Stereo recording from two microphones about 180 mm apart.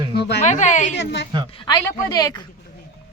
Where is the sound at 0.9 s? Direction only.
75° left (ahead or behind).